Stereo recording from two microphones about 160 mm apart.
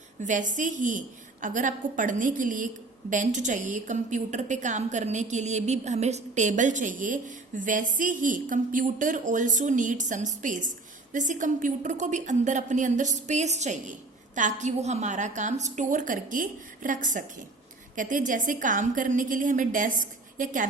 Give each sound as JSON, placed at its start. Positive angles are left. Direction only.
{"t": 0.2, "sound": "a woman's voice", "side_deg": -50}